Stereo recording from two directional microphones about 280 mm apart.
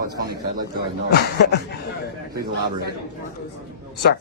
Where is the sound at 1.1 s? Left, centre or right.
Left.